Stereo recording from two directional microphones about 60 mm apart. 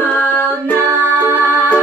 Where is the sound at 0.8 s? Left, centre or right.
Right.